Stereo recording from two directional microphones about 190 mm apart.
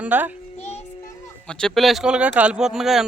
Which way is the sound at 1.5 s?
5° left (ahead or behind).